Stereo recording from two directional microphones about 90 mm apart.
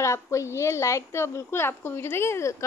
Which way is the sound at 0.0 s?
35° left (ahead or behind).